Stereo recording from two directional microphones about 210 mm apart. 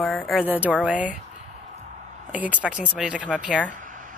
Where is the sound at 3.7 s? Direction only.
40° right (ahead or behind).